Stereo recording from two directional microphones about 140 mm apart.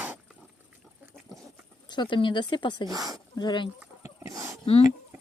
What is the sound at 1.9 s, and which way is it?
Speech, 35° left (ahead or behind).